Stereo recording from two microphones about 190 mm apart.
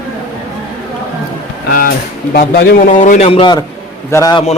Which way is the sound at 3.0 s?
40° left (ahead or behind).